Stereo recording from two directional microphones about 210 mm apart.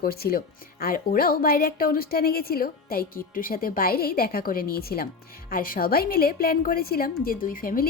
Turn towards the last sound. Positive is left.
turn(degrees=40)  # may be behind; listen again after turning